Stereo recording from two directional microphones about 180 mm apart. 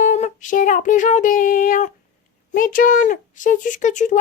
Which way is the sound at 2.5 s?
50° left (ahead or behind).